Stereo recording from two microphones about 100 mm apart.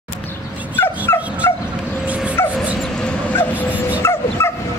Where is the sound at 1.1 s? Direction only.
25° left (ahead or behind).